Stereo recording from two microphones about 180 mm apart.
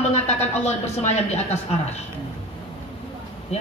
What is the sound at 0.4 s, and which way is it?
A woman's voice, 35° left (ahead or behind).